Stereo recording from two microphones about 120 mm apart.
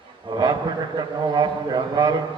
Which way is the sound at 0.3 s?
40° right (ahead or behind).